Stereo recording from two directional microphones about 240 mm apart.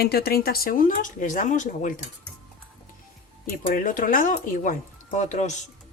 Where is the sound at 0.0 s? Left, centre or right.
Left.